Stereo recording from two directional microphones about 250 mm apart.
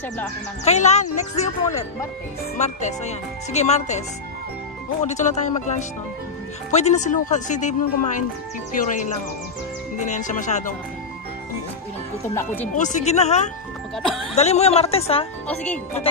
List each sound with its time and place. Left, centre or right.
0.7 s speech: left
5.0 s speech: left
9.9 s speech: left
12.7 s speech: left
15.4 s speech: centre